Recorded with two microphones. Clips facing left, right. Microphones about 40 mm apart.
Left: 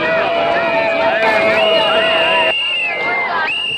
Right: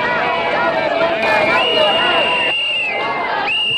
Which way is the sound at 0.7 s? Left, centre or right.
Left.